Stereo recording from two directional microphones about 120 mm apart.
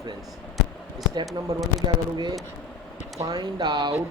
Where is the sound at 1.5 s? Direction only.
30° right (ahead or behind).